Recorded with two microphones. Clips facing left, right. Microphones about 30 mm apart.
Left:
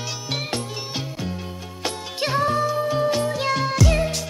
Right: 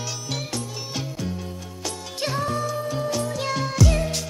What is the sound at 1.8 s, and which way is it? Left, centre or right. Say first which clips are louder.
Music: left 4 dB; left.